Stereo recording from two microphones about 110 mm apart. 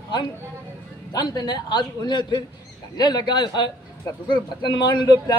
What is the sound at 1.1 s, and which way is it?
A man's voice, 40° left (ahead or behind).